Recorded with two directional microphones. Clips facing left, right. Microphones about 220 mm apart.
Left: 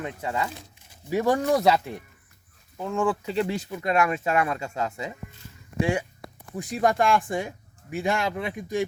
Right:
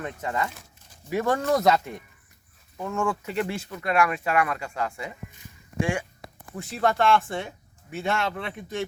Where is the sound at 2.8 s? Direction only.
15° left (ahead or behind).